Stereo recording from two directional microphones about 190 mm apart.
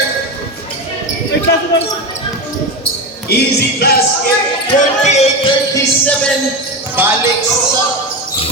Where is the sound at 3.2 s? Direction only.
55° left (ahead or behind).